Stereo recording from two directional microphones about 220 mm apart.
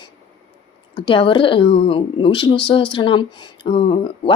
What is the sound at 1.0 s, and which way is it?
Speech, 20° left (ahead or behind).